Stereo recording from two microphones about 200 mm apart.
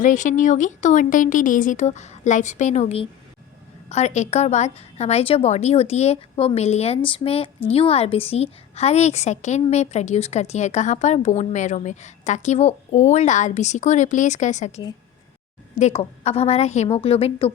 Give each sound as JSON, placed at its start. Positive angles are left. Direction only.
{"t": 0.0, "sound": "a woman's voice", "side_deg": 40}